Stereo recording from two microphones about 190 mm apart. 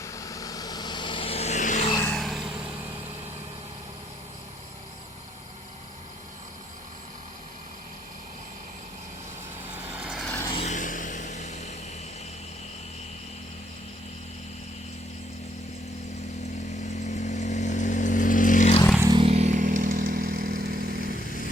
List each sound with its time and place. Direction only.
0.0 s vehicle: 15° left (ahead or behind); by 1.9 s 40° left (ahead or behind)
2.0 s vehicle: 10° left (ahead or behind)
2.2 s vehicle: centre (ahead or behind)
9.7 s vehicle: 5° right (ahead or behind)
10.5 s vehicle: 35° left (ahead or behind)
16.9 s vehicle: 40° left (ahead or behind)
18.9 s motorcycle: 20° right (ahead or behind); by 21.0 s 55° right (ahead or behind)